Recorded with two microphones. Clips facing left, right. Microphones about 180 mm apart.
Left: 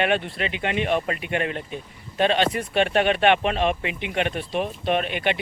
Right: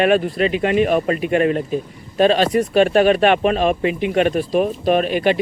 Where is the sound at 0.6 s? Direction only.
35° right (ahead or behind).